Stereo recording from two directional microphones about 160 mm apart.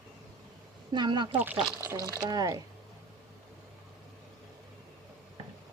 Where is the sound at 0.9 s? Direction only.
30° right (ahead or behind).